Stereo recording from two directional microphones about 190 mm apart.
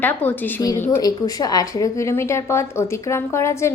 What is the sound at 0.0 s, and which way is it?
A woman's voice, 10° left (ahead or behind).